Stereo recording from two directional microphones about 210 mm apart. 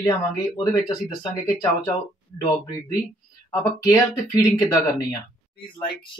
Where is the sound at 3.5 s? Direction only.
15° left (ahead or behind).